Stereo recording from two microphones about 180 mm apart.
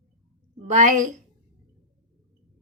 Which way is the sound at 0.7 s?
45° right (ahead or behind).